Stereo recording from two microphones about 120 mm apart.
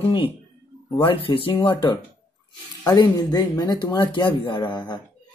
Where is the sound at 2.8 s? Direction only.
35° left (ahead or behind).